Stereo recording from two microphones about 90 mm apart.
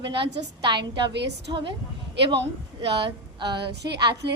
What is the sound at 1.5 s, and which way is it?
Speech, 50° right (ahead or behind).